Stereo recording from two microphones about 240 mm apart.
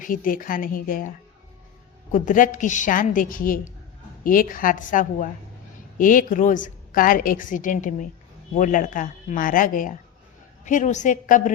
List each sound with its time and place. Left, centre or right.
0.0 s a woman's voice: left
2.1 s a woman's voice: left